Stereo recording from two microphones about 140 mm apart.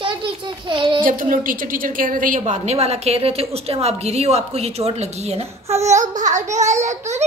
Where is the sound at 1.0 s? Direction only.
75° right (ahead or behind); by 7.2 s 55° right (ahead or behind).